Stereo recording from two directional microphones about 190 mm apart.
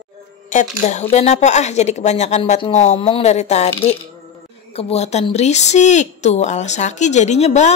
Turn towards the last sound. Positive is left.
turn(degrees=35)  # may be behind; listen again after turning